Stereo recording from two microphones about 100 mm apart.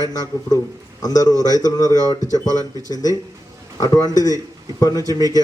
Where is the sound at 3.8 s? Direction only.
35° left (ahead or behind).